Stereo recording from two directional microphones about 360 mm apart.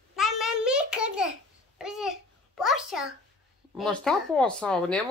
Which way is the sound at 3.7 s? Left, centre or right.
Centre.